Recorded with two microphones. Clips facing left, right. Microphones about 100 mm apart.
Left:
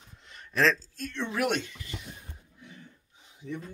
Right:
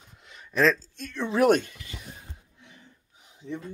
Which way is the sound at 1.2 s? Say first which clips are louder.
Right 9 dB; 30° right (ahead or behind).